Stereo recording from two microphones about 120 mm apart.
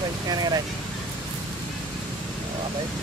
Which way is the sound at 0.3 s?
35° right (ahead or behind).